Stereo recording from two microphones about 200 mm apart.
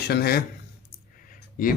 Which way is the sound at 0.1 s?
50° left (ahead or behind).